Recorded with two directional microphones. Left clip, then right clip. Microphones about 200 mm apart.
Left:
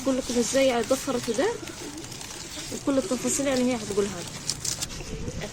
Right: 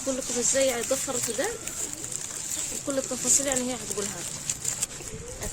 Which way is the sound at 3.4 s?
30° left (ahead or behind).